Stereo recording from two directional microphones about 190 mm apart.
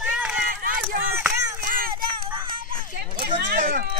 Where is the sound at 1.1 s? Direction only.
15° right (ahead or behind).